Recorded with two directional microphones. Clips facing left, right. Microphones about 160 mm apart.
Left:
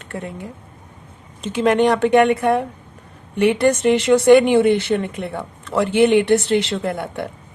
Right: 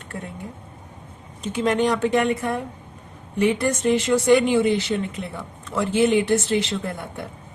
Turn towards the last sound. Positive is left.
turn(degrees=75)  # may be behind; listen again after turning